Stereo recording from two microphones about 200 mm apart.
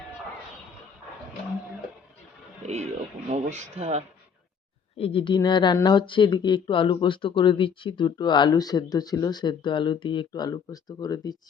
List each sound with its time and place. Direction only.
2.6 s speech: 35° right (ahead or behind)
4.9 s speech: 30° left (ahead or behind)